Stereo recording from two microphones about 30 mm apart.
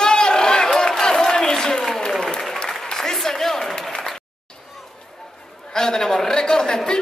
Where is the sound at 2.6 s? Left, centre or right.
Centre.